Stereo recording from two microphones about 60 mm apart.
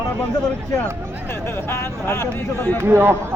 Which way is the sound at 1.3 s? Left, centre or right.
Left.